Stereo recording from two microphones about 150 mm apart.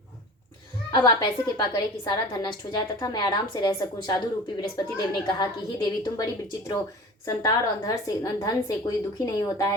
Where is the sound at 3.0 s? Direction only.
30° left (ahead or behind).